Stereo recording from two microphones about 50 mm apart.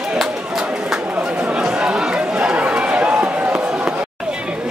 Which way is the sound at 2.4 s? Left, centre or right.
Right.